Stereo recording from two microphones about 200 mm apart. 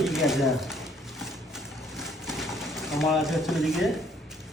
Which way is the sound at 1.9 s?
Centre (ahead or behind).